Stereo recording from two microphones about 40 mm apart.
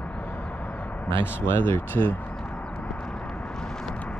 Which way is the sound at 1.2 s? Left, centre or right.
Left.